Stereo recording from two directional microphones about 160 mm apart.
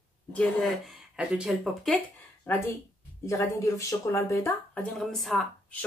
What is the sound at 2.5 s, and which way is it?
Speech, 15° left (ahead or behind).